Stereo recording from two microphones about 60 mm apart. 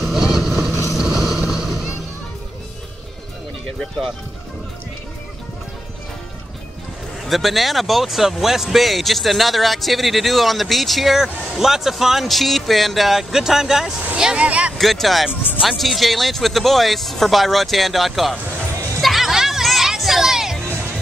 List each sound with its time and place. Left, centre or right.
0.1 s vehicle: centre
7.2 s speech: centre
14.8 s speech: centre
18.9 s music: centre